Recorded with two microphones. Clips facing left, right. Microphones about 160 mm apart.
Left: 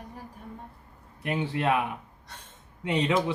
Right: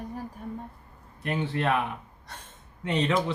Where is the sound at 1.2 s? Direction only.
10° left (ahead or behind).